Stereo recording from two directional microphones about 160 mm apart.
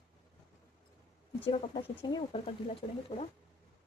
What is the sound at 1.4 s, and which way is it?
Speech, 35° left (ahead or behind).